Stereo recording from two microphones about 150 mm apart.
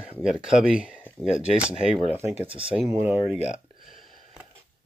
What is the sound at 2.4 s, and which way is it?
Speech, 35° right (ahead or behind).